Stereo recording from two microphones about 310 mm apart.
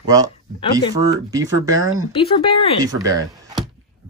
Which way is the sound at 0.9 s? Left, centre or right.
Centre.